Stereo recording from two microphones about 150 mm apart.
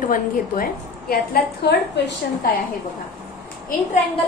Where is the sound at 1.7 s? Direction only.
90° left.